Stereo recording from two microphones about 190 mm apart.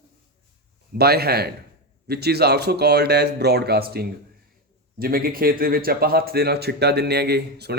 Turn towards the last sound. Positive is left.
turn(degrees=-60)  # may be behind; listen again after turning